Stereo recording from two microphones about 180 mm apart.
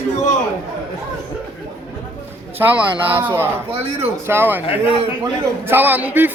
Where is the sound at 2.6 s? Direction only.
10° right (ahead or behind).